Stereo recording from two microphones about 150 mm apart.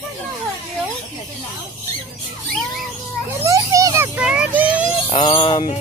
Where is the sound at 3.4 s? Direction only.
20° right (ahead or behind).